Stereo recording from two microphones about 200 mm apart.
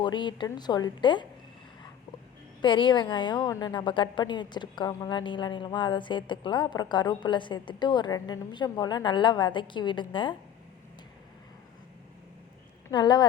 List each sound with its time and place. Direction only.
0.0 s a woman's voice: 20° left (ahead or behind)
2.6 s a woman's voice: 25° left (ahead or behind)
12.9 s a woman's voice: 20° left (ahead or behind)